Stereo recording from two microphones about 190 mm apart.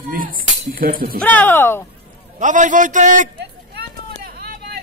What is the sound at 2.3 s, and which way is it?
Speech, 40° right (ahead or behind).